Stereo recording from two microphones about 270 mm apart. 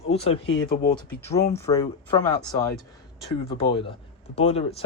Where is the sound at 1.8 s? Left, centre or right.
Centre.